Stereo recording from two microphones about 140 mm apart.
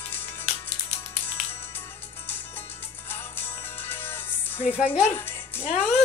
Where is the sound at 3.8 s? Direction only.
15° left (ahead or behind).